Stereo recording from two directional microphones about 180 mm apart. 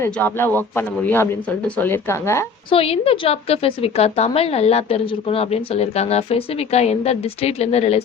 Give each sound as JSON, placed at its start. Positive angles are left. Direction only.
{"t": 0.0, "sound": "a man's voice", "side_deg": 10}
{"t": 2.6, "sound": "a woman's voice", "side_deg": 30}